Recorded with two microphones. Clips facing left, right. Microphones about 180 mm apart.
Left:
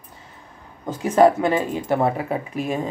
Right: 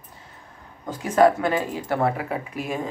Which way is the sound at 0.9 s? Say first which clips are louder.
Left 2 dB; 20° left (ahead or behind).